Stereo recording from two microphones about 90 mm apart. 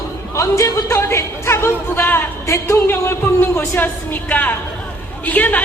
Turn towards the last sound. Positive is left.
turn(degrees=20)  # may be behind; listen again after turning